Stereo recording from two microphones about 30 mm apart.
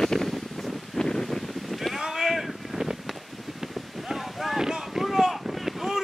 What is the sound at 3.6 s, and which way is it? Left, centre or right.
Boat, centre.